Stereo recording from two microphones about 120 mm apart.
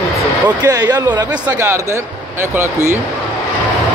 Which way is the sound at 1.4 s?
20° right (ahead or behind).